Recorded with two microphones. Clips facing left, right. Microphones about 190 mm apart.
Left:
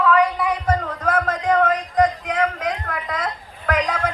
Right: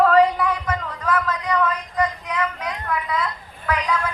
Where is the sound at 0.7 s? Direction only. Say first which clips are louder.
Left 3 dB; 45° left (ahead or behind).